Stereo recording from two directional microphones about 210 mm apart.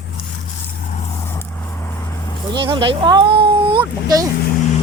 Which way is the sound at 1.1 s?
15° left (ahead or behind).